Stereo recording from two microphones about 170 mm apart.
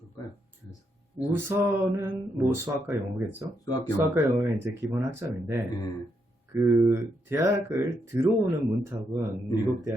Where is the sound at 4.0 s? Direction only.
15° right (ahead or behind).